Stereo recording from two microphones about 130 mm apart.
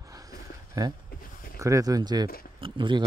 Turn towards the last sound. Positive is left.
turn(degrees=-40)  # may be behind; listen again after turning